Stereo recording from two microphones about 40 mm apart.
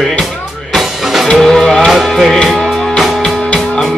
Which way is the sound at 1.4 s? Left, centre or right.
Centre.